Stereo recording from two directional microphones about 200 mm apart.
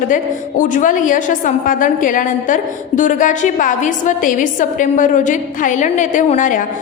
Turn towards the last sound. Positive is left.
turn(degrees=40)  # may be behind; listen again after turning